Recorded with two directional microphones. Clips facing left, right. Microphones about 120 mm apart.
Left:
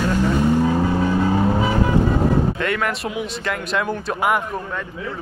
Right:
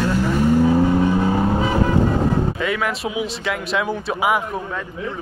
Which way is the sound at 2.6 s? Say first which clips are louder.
Even; centre (ahead or behind).